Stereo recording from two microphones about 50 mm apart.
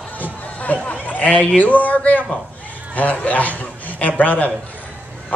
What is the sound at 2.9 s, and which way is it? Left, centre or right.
A man's voice, left.